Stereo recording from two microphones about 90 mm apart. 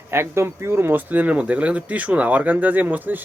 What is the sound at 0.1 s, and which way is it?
Speech, 25° right (ahead or behind).